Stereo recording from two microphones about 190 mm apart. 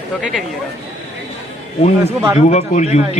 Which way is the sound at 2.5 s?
35° left (ahead or behind).